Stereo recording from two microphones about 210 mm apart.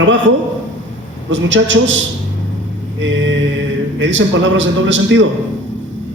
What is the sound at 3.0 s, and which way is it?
A man's voice, 60° right (ahead or behind).